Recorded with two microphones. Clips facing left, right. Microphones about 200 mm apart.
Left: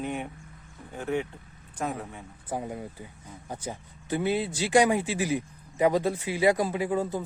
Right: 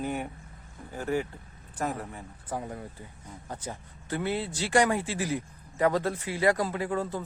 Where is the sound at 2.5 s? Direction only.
20° left (ahead or behind).